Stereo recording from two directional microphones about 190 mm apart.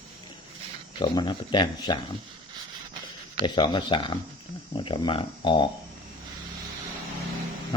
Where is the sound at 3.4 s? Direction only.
25° left (ahead or behind).